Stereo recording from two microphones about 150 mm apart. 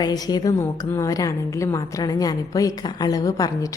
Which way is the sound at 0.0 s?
25° left (ahead or behind).